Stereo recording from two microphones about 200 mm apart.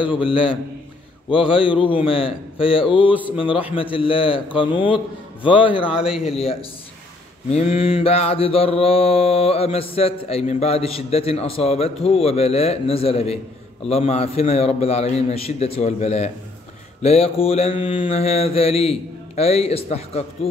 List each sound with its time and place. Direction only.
0.0 s mantra: 25° left (ahead or behind)
5.9 s speech: 5° right (ahead or behind)
6.2 s mantra: 30° left (ahead or behind)
7.5 s mantra: 30° left (ahead or behind)
13.8 s a man's voice: 30° left (ahead or behind)
17.0 s mantra: 30° left (ahead or behind)